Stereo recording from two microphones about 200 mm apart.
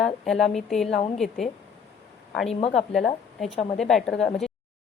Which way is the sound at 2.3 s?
Centre (ahead or behind).